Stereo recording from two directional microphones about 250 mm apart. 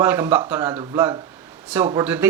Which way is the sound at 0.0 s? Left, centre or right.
Centre.